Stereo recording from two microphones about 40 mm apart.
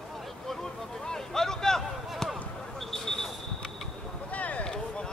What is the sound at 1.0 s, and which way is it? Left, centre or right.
Vehicle, centre.